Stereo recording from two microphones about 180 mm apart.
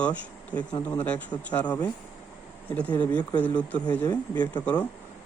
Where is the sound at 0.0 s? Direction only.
10° left (ahead or behind).